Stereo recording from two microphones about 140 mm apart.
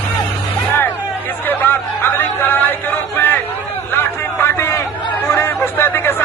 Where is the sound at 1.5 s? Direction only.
15° left (ahead or behind).